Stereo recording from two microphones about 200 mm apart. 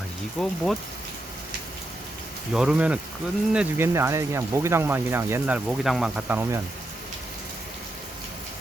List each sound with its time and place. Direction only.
0.3 s speech: centre (ahead or behind)
2.5 s speech: 5° right (ahead or behind)